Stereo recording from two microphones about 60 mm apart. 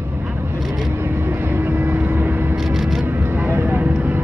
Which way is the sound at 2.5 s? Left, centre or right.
Centre.